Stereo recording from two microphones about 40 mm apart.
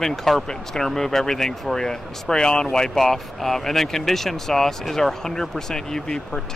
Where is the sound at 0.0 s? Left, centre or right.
Centre.